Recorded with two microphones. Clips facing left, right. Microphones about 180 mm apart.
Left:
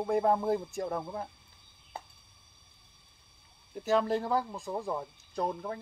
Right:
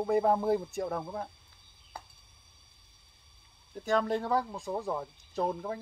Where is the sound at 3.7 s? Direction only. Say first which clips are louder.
Left 1 dB; 5° left (ahead or behind).